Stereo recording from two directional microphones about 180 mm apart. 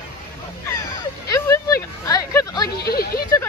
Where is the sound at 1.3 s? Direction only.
15° left (ahead or behind).